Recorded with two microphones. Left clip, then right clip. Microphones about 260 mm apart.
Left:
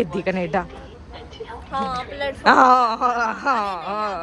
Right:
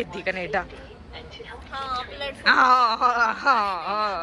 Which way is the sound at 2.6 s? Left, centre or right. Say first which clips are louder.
Left 3 dB; centre.